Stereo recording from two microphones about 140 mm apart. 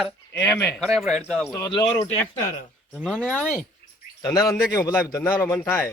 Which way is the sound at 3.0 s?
5° right (ahead or behind).